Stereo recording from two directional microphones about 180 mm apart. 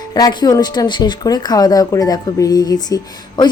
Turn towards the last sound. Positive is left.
turn(degrees=25)  # may be behind; listen again after turning